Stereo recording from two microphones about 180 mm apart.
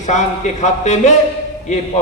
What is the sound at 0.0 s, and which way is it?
A man's voice, 40° left (ahead or behind).